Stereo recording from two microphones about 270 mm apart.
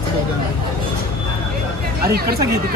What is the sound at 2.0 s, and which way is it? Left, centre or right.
Speech, right.